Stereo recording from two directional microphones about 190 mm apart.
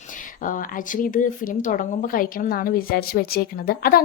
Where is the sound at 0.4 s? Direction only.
45° left (ahead or behind).